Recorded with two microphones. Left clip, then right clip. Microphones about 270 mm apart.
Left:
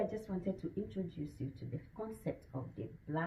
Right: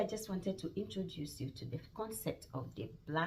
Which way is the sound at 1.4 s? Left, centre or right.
Centre.